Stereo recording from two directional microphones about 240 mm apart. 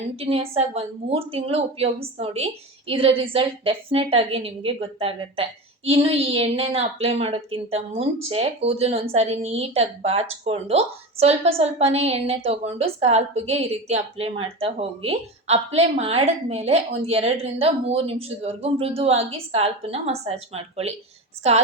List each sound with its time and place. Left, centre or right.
0.2 s a woman's voice: right